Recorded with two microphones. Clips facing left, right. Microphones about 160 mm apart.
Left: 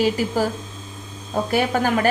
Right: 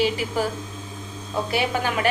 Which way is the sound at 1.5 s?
40° left (ahead or behind).